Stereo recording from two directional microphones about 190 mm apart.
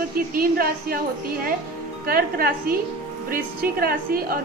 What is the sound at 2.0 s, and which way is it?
A woman's voice, 50° right (ahead or behind).